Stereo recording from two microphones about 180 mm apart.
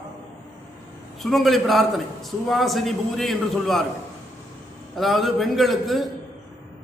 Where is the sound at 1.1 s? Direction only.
Centre (ahead or behind).